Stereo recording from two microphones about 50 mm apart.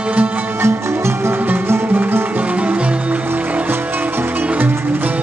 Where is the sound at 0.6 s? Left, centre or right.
Right.